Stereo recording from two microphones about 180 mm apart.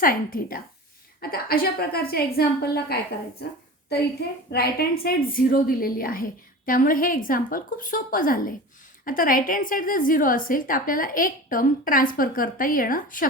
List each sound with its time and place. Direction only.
0.0 s a woman's voice: 50° left (ahead or behind)